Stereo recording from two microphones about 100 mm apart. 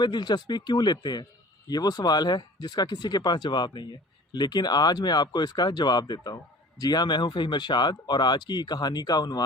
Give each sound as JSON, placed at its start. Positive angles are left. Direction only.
{"t": 0.0, "sound": "speech", "side_deg": 45}